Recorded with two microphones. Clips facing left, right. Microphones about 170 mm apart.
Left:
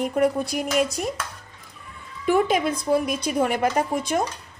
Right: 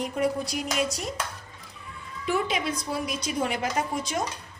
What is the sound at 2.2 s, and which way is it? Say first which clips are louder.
A woman's voice: left 7 dB; 50° left (ahead or behind).